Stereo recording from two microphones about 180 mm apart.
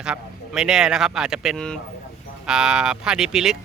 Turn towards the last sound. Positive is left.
turn(degrees=-5)  # may be behind; listen again after turning